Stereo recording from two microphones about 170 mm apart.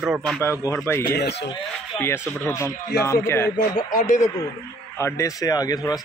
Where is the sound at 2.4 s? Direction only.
15° left (ahead or behind).